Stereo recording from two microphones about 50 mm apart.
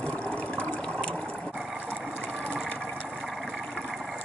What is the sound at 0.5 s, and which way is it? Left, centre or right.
Water, left.